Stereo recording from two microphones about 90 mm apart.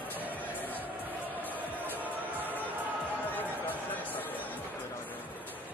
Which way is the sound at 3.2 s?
20° left (ahead or behind).